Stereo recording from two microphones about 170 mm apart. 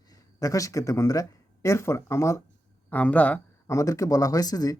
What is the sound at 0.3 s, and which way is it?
Speech, 20° left (ahead or behind).